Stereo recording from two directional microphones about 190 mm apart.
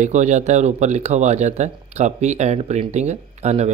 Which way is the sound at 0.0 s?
40° right (ahead or behind).